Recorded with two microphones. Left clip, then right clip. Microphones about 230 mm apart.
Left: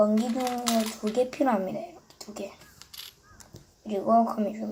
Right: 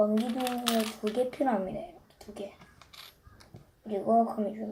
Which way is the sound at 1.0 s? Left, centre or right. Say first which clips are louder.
Left 3 dB; centre.